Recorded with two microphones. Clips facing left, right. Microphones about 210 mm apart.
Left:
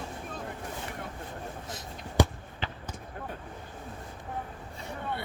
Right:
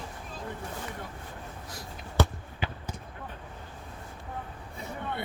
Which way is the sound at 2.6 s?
10° right (ahead or behind).